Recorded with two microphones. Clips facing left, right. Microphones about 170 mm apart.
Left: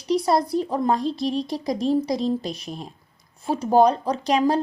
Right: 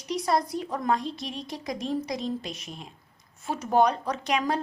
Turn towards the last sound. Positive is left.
turn(degrees=35)  # may be behind; listen again after turning